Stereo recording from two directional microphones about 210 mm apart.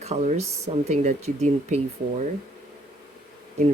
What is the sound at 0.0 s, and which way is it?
Speech, 35° right (ahead or behind).